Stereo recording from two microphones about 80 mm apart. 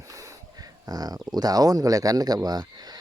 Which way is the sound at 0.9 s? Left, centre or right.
Right.